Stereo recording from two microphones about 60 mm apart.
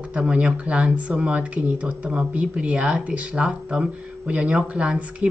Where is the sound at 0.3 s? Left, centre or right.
Right.